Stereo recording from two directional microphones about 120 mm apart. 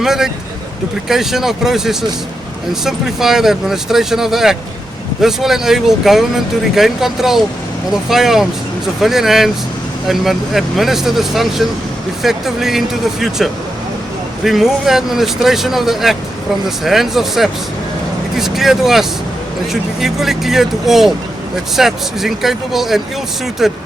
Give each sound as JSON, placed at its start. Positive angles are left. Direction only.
{"t": 0.0, "sound": "speech", "side_deg": -5}